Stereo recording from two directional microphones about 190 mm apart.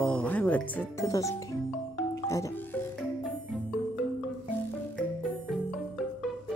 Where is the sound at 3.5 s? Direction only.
Centre (ahead or behind).